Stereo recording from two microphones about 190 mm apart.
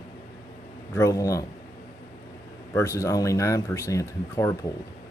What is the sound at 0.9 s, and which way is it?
Speech, 15° left (ahead or behind).